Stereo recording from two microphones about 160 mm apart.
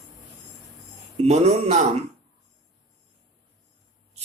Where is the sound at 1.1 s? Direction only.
40° right (ahead or behind).